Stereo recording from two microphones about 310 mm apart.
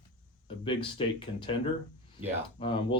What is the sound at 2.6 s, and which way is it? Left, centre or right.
Speech, centre.